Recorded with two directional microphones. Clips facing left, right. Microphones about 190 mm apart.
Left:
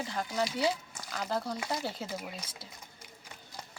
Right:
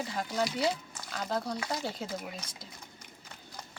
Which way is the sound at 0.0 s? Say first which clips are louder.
Right 1 dB; centre (ahead or behind).